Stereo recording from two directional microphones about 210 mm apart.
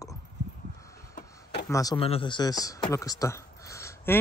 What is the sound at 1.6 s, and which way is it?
Speech, 15° left (ahead or behind).